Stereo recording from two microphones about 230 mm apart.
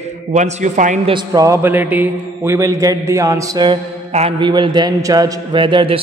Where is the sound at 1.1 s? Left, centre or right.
Centre.